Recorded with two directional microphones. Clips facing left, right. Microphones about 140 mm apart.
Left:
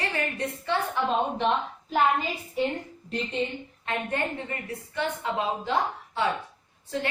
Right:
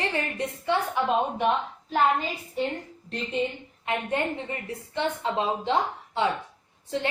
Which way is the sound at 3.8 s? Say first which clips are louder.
Right 2 dB; 20° right (ahead or behind).